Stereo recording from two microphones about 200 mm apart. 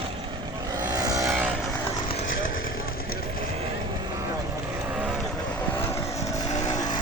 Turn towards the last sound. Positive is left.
turn(degrees=20)  # may be behind; listen again after turning